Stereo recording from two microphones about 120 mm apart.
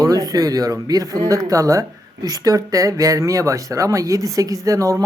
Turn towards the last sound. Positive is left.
turn(degrees=-25)  # may be behind; listen again after turning